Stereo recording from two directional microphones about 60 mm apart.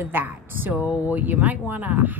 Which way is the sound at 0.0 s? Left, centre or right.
Right.